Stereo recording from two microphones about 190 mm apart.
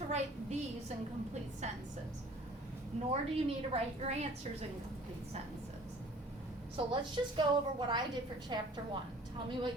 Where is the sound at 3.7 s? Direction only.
35° right (ahead or behind).